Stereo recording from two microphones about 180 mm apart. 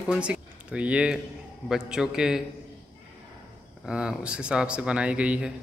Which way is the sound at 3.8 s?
5° right (ahead or behind).